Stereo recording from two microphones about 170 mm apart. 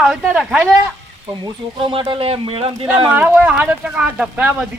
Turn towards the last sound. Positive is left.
turn(degrees=-5)  # may be behind; listen again after turning